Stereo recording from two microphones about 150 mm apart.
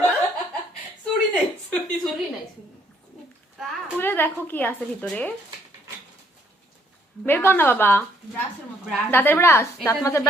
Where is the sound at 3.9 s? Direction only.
15° left (ahead or behind).